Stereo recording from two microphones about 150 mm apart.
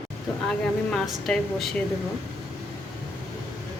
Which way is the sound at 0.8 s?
5° left (ahead or behind).